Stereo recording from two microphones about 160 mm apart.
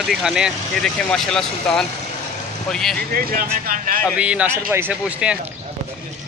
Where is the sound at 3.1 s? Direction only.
65° right (ahead or behind).